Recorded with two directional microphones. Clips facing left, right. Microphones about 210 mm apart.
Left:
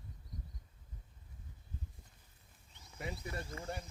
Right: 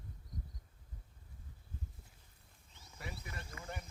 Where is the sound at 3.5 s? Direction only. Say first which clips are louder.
Left 4 dB; 30° left (ahead or behind).